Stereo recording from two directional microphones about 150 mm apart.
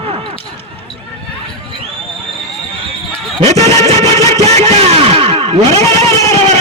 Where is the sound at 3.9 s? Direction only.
20° left (ahead or behind).